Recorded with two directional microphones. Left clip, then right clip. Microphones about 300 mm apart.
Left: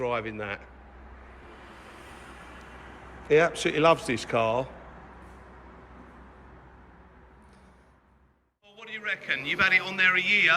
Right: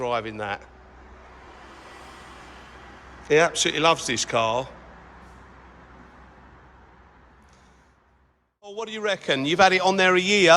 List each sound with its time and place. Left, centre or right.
0.0 s a man's voice: centre
3.2 s a man's voice: centre
8.6 s a man's voice: centre